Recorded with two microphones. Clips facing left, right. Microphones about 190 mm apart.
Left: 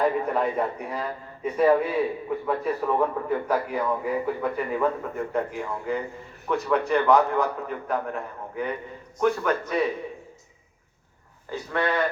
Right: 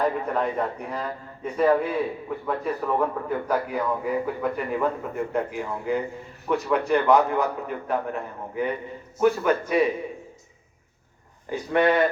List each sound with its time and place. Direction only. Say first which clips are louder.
0.3 s a man's voice: left 1 dB; 5° left (ahead or behind)
11.5 s speech: right 5 dB; 20° right (ahead or behind)